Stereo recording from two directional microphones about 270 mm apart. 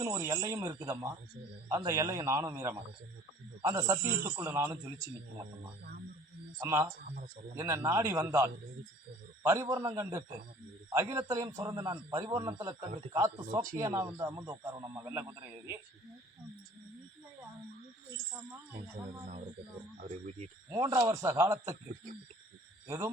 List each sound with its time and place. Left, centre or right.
0.0 s a man's voice: centre
6.6 s a man's voice: centre
18.8 s speech: right
20.7 s a man's voice: centre